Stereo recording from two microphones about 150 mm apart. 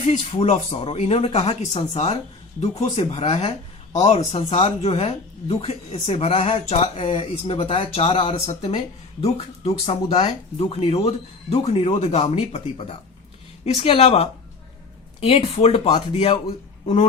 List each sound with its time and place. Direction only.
0.0 s speech: 55° left (ahead or behind)
0.3 s speech: 40° left (ahead or behind)
15.3 s speech: 45° left (ahead or behind)